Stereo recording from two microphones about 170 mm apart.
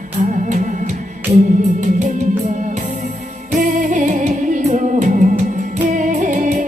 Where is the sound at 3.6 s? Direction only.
50° right (ahead or behind).